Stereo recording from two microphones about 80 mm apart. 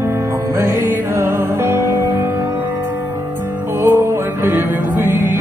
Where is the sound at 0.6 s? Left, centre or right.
Right.